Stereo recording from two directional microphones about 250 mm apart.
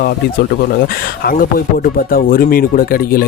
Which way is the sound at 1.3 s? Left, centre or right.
Left.